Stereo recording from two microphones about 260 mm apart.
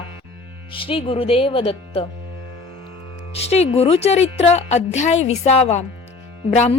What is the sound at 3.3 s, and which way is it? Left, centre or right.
A woman's voice, left.